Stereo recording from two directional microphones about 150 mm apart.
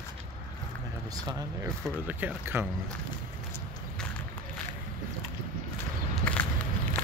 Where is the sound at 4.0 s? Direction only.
5° left (ahead or behind).